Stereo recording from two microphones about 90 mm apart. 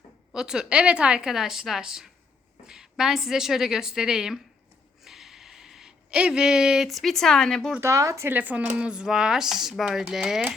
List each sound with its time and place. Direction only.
0.3 s a woman's voice: 10° right (ahead or behind)
5.0 s a sound: 5° right (ahead or behind)
7.8 s speech: 35° right (ahead or behind)
8.3 s speech: 20° right (ahead or behind)